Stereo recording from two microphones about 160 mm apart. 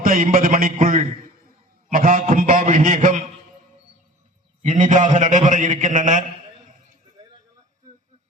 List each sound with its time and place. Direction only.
0.0 s a sound: 60° right (ahead or behind)
2.7 s a man's voice: 60° right (ahead or behind)
4.6 s a man's voice: 50° right (ahead or behind)